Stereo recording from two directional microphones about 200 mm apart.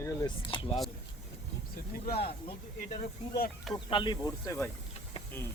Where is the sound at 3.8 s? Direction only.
25° left (ahead or behind).